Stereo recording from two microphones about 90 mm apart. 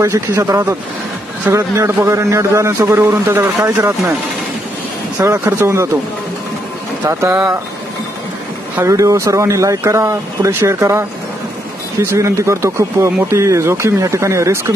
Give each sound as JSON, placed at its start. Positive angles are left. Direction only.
{"t": 0.0, "sound": "speech", "side_deg": -35}
{"t": 1.5, "sound": "a man's voice", "side_deg": -30}
{"t": 5.2, "sound": "speech", "side_deg": -30}
{"t": 7.1, "sound": "speech", "side_deg": -30}
{"t": 8.8, "sound": "speech", "side_deg": -35}